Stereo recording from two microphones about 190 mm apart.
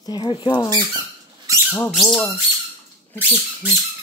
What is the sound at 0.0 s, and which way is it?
Speech, 20° left (ahead or behind).